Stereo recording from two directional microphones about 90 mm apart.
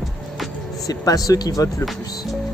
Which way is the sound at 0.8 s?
40° left (ahead or behind).